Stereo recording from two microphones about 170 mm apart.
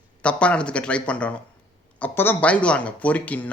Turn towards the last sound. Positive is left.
turn(degrees=10)  # may be behind; listen again after turning